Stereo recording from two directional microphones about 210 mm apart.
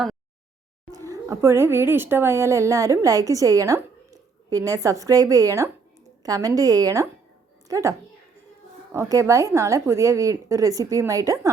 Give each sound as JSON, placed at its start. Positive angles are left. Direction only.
{"t": 0.9, "sound": "a woman's voice", "side_deg": -15}